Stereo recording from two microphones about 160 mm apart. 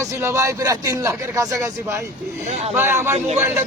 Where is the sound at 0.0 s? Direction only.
15° right (ahead or behind).